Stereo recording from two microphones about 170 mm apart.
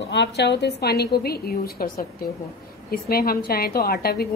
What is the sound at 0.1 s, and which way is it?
A woman's voice, 90° left.